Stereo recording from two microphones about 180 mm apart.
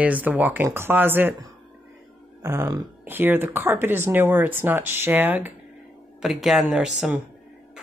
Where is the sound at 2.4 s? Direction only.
20° right (ahead or behind).